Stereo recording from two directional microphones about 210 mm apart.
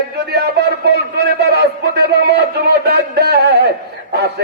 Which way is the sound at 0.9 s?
50° right (ahead or behind).